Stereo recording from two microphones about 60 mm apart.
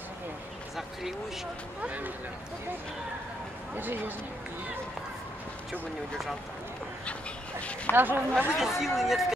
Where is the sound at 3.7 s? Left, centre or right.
Right.